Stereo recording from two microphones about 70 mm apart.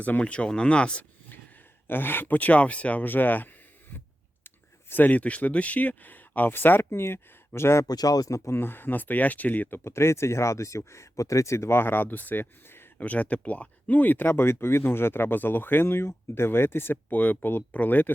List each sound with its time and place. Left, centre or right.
0.0 s speech: left
1.9 s speech: left
7.9 s speech: left
8.4 s speech: left
13.0 s speech: left